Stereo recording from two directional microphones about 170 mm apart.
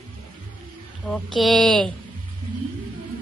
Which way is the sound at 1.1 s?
5° left (ahead or behind).